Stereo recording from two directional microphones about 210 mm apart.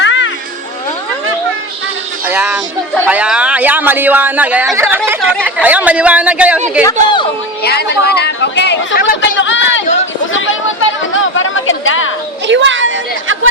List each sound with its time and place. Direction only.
0.0 s music: 60° left (ahead or behind)
2.2 s music: 10° right (ahead or behind)
3.1 s speech: 5° right (ahead or behind)
6.8 s speech: 20° left (ahead or behind)
7.6 s speech: 50° left (ahead or behind)
9.4 s a sound: 60° left (ahead or behind)
12.5 s chatter: 60° right (ahead or behind)